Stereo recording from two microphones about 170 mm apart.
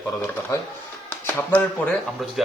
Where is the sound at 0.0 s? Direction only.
20° left (ahead or behind).